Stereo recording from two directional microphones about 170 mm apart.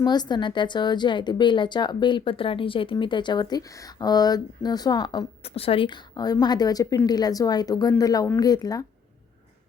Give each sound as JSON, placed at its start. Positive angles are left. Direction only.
{"t": 0.0, "sound": "a woman's voice", "side_deg": 25}